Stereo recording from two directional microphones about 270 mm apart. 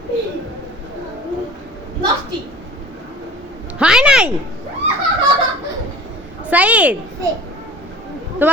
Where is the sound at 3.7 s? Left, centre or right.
Centre.